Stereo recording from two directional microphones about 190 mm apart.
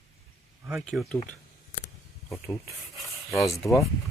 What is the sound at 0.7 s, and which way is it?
Speech, centre (ahead or behind).